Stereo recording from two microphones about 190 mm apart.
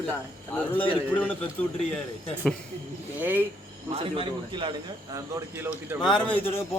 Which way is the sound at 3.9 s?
30° right (ahead or behind).